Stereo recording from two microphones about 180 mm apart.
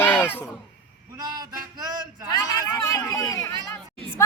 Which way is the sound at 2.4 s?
20° left (ahead or behind).